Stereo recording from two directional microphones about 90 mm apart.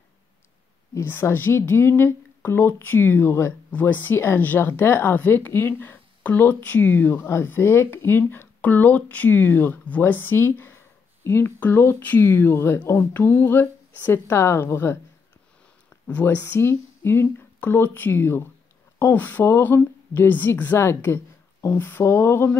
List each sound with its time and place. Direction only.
0.9 s a woman's voice: 25° left (ahead or behind)
16.1 s a woman's voice: 20° left (ahead or behind)